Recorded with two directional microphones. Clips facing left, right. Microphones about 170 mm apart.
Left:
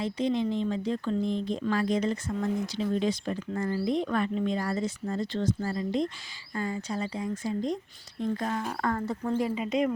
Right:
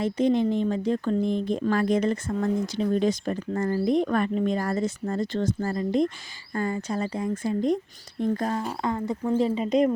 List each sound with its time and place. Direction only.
0.0 s speech: 50° right (ahead or behind)
8.2 s speech: 45° right (ahead or behind)
8.8 s speech: 15° right (ahead or behind)
9.6 s speech: 35° right (ahead or behind)